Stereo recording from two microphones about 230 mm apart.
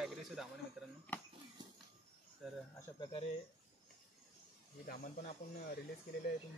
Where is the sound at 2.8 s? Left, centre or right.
Left.